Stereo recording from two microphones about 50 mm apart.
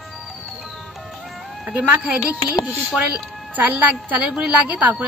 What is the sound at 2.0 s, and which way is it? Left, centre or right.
A woman's voice, right.